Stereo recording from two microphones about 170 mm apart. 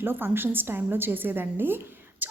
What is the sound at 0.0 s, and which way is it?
A woman's voice, 10° right (ahead or behind).